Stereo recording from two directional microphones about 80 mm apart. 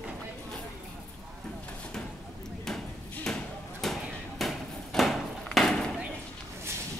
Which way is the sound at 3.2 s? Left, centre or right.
Centre.